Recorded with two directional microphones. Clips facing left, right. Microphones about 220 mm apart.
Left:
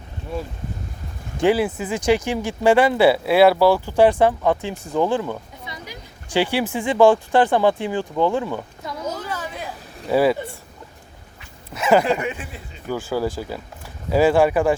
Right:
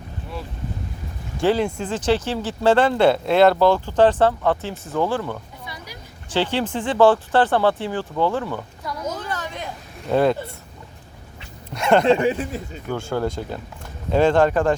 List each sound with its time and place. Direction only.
1.4 s speech: 10° left (ahead or behind)
4.9 s a sound: 15° left (ahead or behind)
6.3 s speech: 10° left (ahead or behind)
9.0 s a sound: 10° left (ahead or behind)
10.1 s speech: 5° left (ahead or behind)
11.7 s speech: 5° left (ahead or behind)
12.0 s speech: 30° right (ahead or behind)
12.9 s speech: 5° left (ahead or behind)